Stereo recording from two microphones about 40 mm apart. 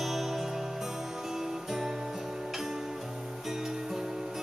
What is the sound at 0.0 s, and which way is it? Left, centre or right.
Music, centre.